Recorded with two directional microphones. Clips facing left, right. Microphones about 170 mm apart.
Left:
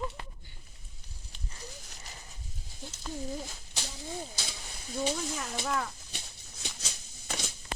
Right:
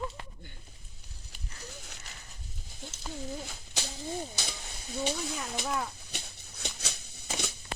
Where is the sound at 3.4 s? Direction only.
65° right (ahead or behind).